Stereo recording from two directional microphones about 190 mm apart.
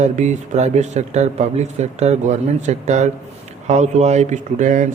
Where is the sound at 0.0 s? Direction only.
40° right (ahead or behind).